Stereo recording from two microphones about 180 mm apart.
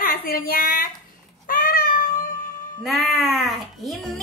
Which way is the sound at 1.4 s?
50° left (ahead or behind).